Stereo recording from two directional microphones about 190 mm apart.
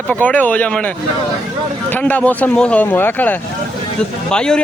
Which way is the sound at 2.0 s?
5° left (ahead or behind).